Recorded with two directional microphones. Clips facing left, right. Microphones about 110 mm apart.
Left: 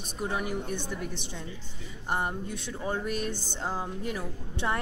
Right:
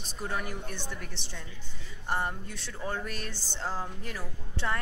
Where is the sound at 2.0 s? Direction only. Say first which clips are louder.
Left 1 dB; 15° left (ahead or behind).